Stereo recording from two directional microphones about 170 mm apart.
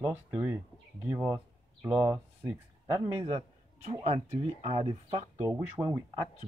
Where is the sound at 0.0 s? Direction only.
10° right (ahead or behind).